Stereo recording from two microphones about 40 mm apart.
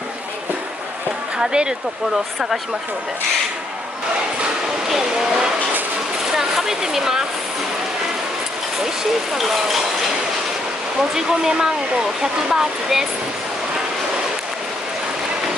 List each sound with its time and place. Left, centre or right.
1.4 s speech: centre
4.9 s a sound: centre
9.3 s speech: centre
11.1 s speech: centre